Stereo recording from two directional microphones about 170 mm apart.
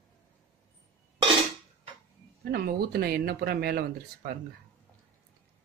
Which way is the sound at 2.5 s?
65° right (ahead or behind).